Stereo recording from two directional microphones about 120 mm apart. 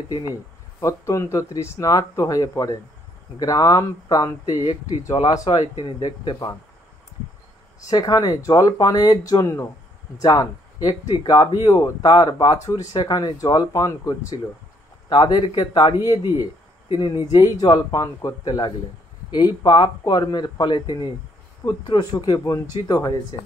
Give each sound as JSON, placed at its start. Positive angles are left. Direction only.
{"t": 0.1, "sound": "speech", "side_deg": 30}
{"t": 7.9, "sound": "speech", "side_deg": 35}